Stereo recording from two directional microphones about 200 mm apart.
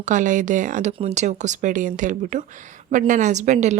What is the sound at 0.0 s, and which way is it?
Speech, 40° right (ahead or behind).